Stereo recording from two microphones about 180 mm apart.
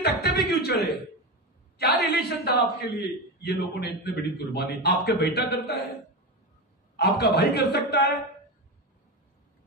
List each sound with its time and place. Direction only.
0.2 s a man's voice: 60° left (ahead or behind)
7.0 s a man's voice: 60° left (ahead or behind)